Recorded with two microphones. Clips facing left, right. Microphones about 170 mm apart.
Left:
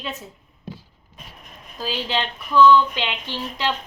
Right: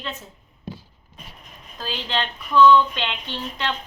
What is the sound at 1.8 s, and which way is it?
Speech, 5° left (ahead or behind).